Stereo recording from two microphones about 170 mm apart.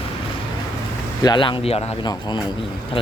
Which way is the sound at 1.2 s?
25° left (ahead or behind).